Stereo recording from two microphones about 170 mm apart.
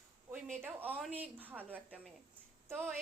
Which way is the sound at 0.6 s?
10° right (ahead or behind).